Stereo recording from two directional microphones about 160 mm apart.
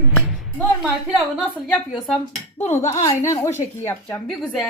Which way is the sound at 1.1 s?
Centre (ahead or behind).